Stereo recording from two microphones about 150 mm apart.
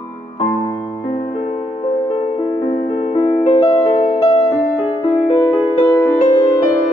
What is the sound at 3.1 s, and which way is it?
Music, 40° left (ahead or behind).